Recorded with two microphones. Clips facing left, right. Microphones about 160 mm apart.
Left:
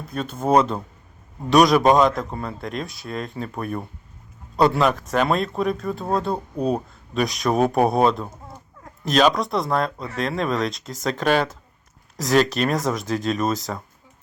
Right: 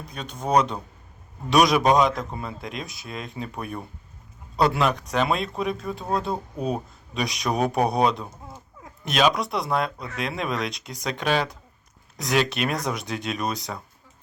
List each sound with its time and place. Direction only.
0.1 s speech: 5° left (ahead or behind)
6.6 s speech: 40° left (ahead or behind)
7.1 s speech: centre (ahead or behind)